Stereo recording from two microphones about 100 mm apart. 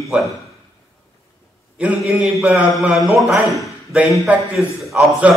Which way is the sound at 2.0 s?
5° right (ahead or behind).